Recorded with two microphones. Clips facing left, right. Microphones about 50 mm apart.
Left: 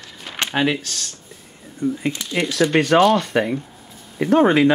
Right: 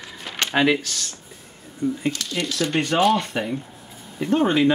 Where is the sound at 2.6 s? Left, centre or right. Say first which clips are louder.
Left 5 dB; left.